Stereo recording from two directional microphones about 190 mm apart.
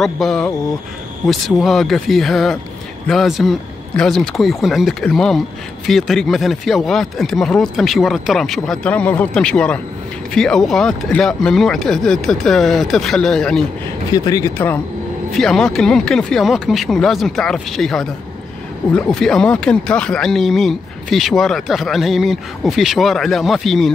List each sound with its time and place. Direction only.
0.0 s speech: centre (ahead or behind)
14.1 s speech: 20° left (ahead or behind)
15.3 s speech: centre (ahead or behind)